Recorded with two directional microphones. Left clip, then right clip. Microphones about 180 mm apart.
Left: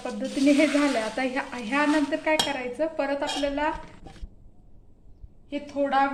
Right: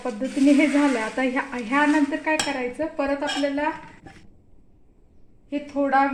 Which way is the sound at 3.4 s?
20° right (ahead or behind).